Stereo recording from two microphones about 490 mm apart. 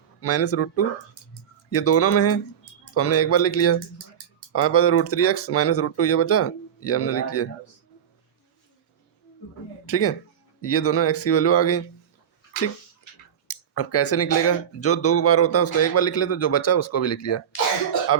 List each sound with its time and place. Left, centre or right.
0.2 s speech: left
9.8 s speech: left
13.5 s speech: left